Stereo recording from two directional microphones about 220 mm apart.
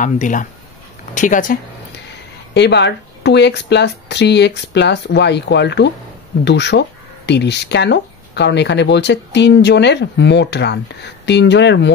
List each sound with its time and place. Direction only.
0.0 s speech: 35° left (ahead or behind)
2.5 s speech: 50° left (ahead or behind)